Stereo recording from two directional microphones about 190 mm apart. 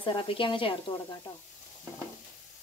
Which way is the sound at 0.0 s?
25° left (ahead or behind).